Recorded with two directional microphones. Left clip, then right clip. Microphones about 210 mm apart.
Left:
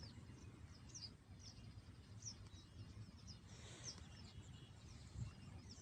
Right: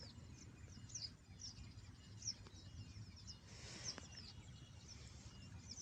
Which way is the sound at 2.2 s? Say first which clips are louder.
Right 7 dB; 25° left (ahead or behind).